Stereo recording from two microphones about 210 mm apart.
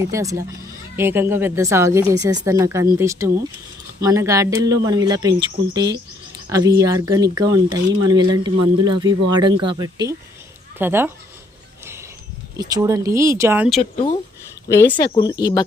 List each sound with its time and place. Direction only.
0.0 s speech: 15° right (ahead or behind)
12.5 s speech: 15° right (ahead or behind)
14.8 s speech: 20° left (ahead or behind)